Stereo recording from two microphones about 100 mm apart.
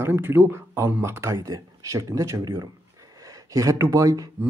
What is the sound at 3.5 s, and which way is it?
Speech, 35° right (ahead or behind).